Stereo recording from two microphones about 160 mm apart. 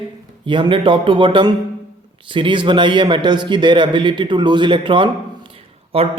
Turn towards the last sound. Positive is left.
turn(degrees=-35)  # may be behind; listen again after turning